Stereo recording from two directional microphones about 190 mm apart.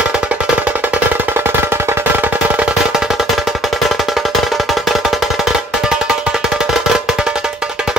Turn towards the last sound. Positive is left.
turn(degrees=-5)  # may be behind; listen again after turning